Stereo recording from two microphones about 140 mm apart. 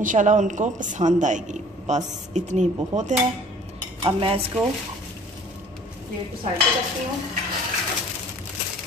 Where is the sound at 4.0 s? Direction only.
40° right (ahead or behind).